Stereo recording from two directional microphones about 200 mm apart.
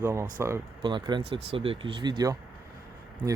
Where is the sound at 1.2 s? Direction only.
60° right (ahead or behind).